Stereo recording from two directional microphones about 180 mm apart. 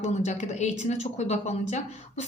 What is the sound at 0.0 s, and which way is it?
A woman's voice, 40° left (ahead or behind).